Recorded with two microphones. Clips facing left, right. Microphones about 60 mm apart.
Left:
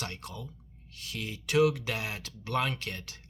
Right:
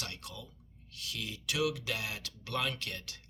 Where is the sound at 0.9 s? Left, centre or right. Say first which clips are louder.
Left 3 dB; left.